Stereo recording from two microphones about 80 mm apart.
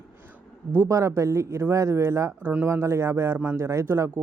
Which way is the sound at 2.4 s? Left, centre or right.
Right.